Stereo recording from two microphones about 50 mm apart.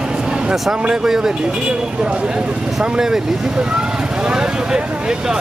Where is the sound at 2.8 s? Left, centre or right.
Centre.